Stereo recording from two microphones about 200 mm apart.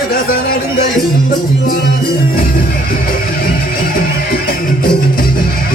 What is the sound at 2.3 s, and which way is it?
Music, 45° left (ahead or behind).